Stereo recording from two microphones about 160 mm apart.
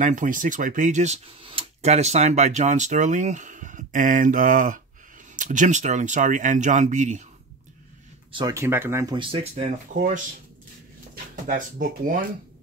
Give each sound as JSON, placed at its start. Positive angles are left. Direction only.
{"t": 0.0, "sound": "speech", "side_deg": -55}
{"t": 8.3, "sound": "speech", "side_deg": -30}
{"t": 8.5, "sound": "speech", "side_deg": -15}
{"t": 9.1, "sound": "speech", "side_deg": -35}
{"t": 9.9, "sound": "speech", "side_deg": -55}
{"t": 11.4, "sound": "speech", "side_deg": -55}